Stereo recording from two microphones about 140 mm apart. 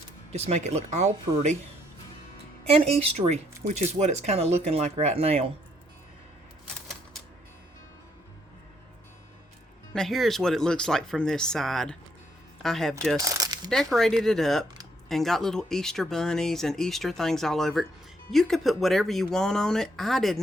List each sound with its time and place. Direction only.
0.3 s speech: 55° right (ahead or behind)
2.6 s speech: 45° right (ahead or behind)
9.9 s speech: centre (ahead or behind)
13.1 s crumpling: 25° right (ahead or behind)
13.7 s speech: centre (ahead or behind)